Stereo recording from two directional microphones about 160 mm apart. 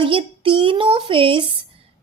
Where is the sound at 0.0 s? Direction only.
35° right (ahead or behind).